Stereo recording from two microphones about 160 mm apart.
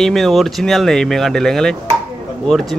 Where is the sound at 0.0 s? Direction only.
Centre (ahead or behind).